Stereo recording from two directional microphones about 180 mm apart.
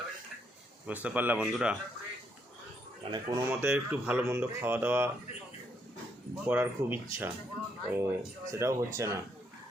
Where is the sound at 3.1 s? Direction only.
20° right (ahead or behind).